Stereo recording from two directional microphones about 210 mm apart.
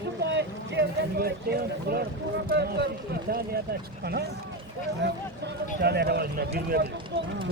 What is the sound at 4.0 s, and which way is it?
Speech, 50° right (ahead or behind).